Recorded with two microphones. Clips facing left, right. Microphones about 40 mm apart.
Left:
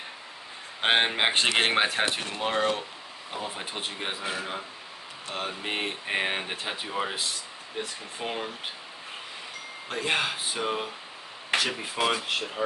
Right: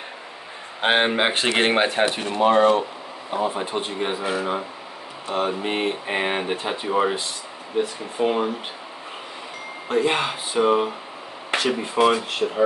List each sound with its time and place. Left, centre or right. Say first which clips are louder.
0.8 s speech: right 4 dB; centre
5.3 s speech: right 8 dB; centre
9.8 s speech: right 7 dB; centre
11.5 s speech: right 6 dB; centre